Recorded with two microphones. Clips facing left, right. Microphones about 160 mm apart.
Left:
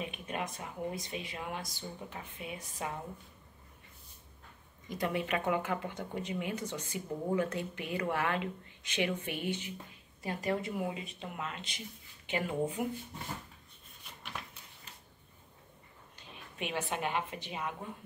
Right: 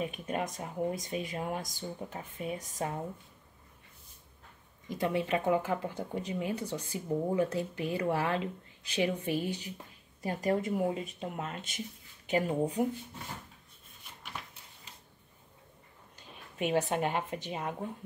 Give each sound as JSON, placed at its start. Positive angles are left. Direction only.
{"t": 0.0, "sound": "speech", "side_deg": -40}
{"t": 4.8, "sound": "speech", "side_deg": -30}
{"t": 16.2, "sound": "a woman's voice", "side_deg": -40}